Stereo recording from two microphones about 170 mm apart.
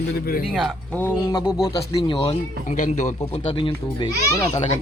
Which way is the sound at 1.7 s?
25° left (ahead or behind).